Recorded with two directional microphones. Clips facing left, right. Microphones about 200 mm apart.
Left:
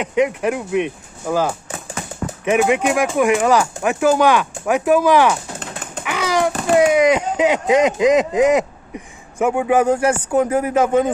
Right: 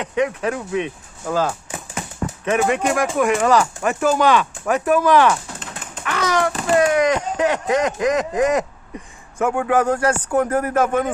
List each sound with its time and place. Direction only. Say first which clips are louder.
0.0 s speech: left 3 dB; 15° left (ahead or behind)